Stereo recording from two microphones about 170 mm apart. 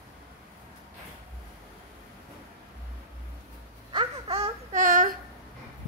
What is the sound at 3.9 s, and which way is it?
Babbling, 30° right (ahead or behind).